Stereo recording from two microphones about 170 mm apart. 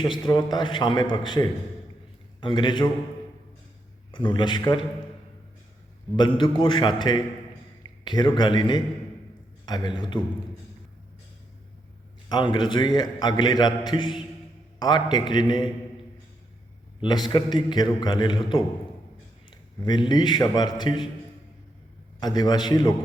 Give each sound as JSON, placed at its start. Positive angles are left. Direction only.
{"t": 0.0, "sound": "a man's voice", "side_deg": 25}
{"t": 4.1, "sound": "a man's voice", "side_deg": 30}
{"t": 6.1, "sound": "a man's voice", "side_deg": 25}
{"t": 12.3, "sound": "a man's voice", "side_deg": 25}
{"t": 17.0, "sound": "a man's voice", "side_deg": 25}
{"t": 22.2, "sound": "a man's voice", "side_deg": 25}